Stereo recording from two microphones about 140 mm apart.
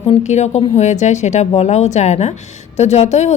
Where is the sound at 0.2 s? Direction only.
55° left (ahead or behind).